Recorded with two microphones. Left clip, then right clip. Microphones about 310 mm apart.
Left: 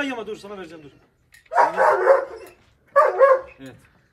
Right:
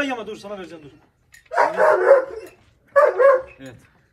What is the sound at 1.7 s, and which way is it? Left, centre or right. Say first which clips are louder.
Dog: right 4 dB; left.